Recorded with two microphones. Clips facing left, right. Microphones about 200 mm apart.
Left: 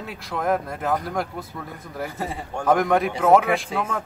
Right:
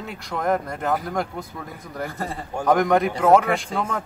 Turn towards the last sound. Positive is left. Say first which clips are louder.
# even
turn(degrees=5)  # may be behind; listen again after turning